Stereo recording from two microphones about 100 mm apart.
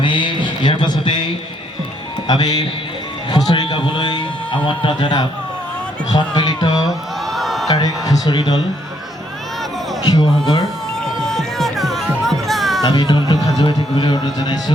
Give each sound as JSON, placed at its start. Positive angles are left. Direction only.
{"t": 0.0, "sound": "music", "side_deg": 55}
{"t": 2.2, "sound": "a man's voice", "side_deg": 45}
{"t": 7.3, "sound": "a sound", "side_deg": 0}
{"t": 7.7, "sound": "speech", "side_deg": 40}
{"t": 10.1, "sound": "a man's voice", "side_deg": 40}
{"t": 11.0, "sound": "music", "side_deg": 5}
{"t": 12.8, "sound": "a man's voice", "side_deg": 45}